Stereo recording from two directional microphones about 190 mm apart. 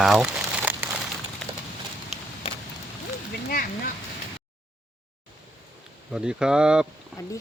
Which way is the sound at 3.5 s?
50° left (ahead or behind).